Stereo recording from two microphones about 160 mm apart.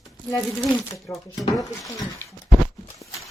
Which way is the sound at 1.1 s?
15° left (ahead or behind).